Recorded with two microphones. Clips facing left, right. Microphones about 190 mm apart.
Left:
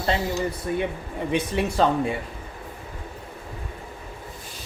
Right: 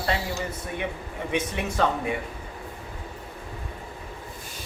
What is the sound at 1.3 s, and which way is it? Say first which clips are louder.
Speech: left 4 dB; 30° left (ahead or behind).